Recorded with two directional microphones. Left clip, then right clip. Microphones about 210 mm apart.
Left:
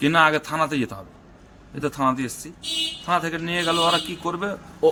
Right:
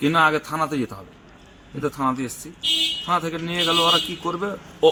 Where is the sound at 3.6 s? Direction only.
10° left (ahead or behind).